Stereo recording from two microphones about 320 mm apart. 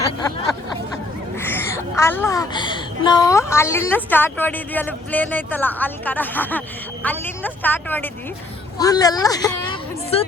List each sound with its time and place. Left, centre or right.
1.4 s a child's voice: centre